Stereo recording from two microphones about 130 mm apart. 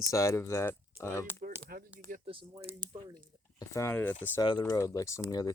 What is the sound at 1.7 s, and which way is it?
Speech, 90° right.